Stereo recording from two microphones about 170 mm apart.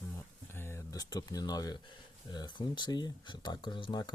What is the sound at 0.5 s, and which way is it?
Speech, 15° left (ahead or behind).